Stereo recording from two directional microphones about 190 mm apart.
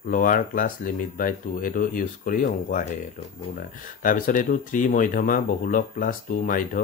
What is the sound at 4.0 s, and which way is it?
Speech, 45° left (ahead or behind).